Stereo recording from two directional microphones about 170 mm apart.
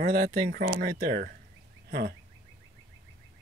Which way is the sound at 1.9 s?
65° right (ahead or behind).